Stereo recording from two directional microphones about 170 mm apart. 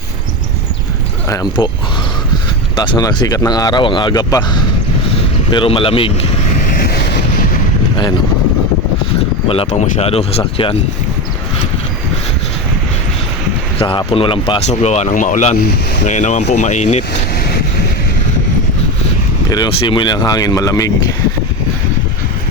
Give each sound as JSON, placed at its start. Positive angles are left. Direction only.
{"t": 1.3, "sound": "speech", "side_deg": 25}
{"t": 2.7, "sound": "speech", "side_deg": 25}
{"t": 9.5, "sound": "speech", "side_deg": 40}
{"t": 13.7, "sound": "speech", "side_deg": 30}
{"t": 14.7, "sound": "speech", "side_deg": 40}
{"t": 19.5, "sound": "speech", "side_deg": 25}